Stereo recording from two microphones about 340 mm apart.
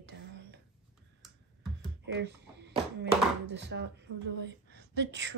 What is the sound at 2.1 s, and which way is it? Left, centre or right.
Speech, right.